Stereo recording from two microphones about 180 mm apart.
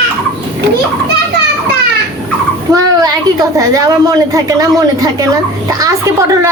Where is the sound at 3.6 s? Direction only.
20° right (ahead or behind).